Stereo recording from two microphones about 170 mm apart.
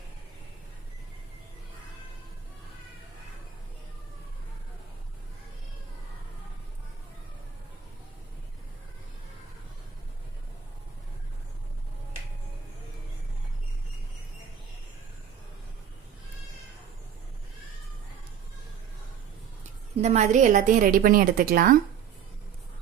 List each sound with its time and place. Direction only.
20.0 s a woman's voice: 40° right (ahead or behind)